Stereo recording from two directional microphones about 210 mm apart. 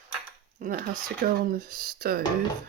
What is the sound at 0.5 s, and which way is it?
Speech, 40° right (ahead or behind).